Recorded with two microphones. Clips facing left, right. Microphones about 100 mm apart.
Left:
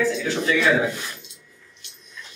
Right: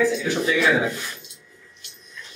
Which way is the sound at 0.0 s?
15° right (ahead or behind).